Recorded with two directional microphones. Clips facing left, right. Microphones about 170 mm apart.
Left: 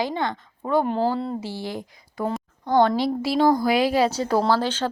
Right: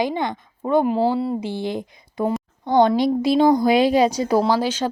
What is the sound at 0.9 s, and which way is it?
Speech, 5° right (ahead or behind).